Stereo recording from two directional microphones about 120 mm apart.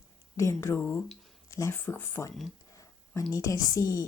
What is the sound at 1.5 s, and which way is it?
A woman's voice, 25° left (ahead or behind).